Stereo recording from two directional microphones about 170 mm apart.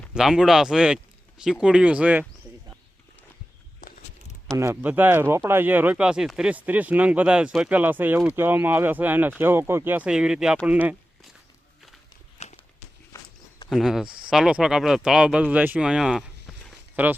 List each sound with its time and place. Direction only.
0.1 s speech: 5° right (ahead or behind)
4.5 s speech: 15° right (ahead or behind)
12.4 s walk: 40° left (ahead or behind)
13.1 s walk: 15° left (ahead or behind)
13.7 s speech: centre (ahead or behind)